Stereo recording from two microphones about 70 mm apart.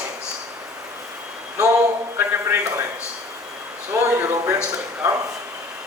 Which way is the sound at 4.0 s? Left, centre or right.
Right.